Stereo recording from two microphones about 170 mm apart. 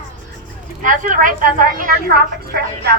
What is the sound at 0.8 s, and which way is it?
A woman's voice, 50° right (ahead or behind).